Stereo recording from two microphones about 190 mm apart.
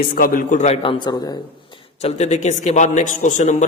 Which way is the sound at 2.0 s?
35° left (ahead or behind).